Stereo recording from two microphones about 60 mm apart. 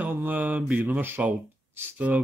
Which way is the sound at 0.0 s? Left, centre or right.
Right.